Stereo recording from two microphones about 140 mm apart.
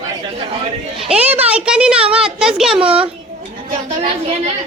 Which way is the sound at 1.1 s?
10° right (ahead or behind).